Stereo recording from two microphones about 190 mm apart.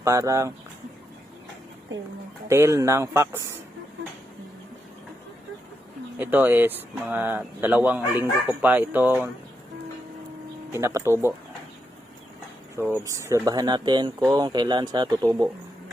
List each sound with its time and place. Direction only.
0.0 s speech: 15° right (ahead or behind)
2.5 s speech: 15° right (ahead or behind)
6.1 s speech: 10° right (ahead or behind)
10.7 s speech: 15° right (ahead or behind)
12.8 s speech: 15° right (ahead or behind)